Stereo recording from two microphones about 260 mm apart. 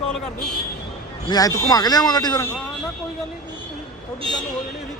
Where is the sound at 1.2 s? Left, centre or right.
Centre.